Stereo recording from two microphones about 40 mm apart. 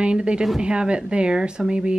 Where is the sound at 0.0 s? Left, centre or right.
Right.